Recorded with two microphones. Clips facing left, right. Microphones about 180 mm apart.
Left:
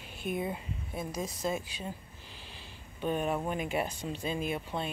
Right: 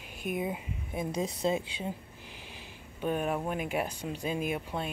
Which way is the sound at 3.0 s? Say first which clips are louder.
Even; 5° right (ahead or behind).